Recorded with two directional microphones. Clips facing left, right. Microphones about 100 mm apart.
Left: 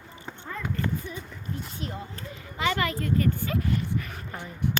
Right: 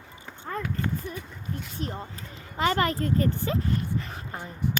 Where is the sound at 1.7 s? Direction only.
40° right (ahead or behind).